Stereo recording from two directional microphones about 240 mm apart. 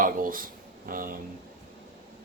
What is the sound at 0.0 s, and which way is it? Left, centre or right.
Speech, right.